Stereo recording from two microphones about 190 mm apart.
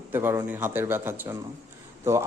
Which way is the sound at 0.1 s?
10° right (ahead or behind).